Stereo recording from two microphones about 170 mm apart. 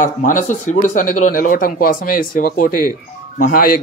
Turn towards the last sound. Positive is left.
turn(degrees=55)  # may be behind; listen again after turning